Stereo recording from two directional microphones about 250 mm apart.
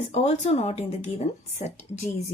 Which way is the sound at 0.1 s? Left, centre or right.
Left.